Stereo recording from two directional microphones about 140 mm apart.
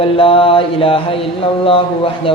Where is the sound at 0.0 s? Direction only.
40° left (ahead or behind).